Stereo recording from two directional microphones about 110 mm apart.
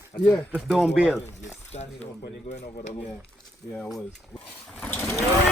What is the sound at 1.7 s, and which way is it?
Speech, 80° left.